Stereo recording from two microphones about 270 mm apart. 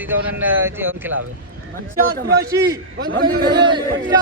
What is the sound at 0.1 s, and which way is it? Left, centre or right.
Speech, centre.